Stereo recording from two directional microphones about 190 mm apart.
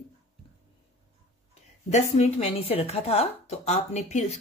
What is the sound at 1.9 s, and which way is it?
Speech, 35° left (ahead or behind).